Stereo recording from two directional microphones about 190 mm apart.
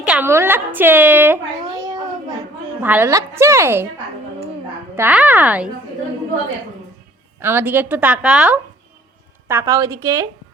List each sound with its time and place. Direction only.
0.0 s a woman's voice: 5° right (ahead or behind)
2.8 s a woman's voice: 10° right (ahead or behind)
4.9 s a woman's voice: 10° right (ahead or behind)
7.3 s a woman's voice: 10° right (ahead or behind)
9.5 s a woman's voice: 15° right (ahead or behind)